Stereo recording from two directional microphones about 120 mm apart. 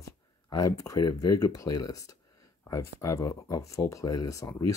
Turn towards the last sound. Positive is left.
turn(degrees=25)  # may be behind; listen again after turning